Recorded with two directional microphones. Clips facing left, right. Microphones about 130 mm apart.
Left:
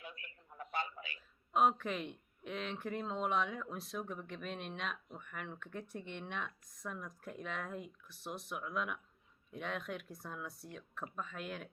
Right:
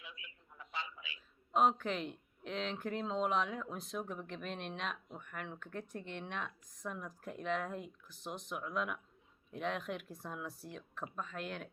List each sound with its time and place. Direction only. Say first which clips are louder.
0.0 s a man's voice: left 3 dB; 50° left (ahead or behind)
1.5 s speech: right 1 dB; centre (ahead or behind)